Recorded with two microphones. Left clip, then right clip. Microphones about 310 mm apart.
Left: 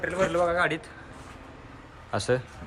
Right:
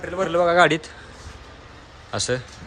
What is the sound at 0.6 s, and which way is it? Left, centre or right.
Speech, centre.